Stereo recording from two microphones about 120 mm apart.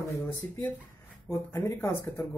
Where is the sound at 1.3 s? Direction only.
25° left (ahead or behind).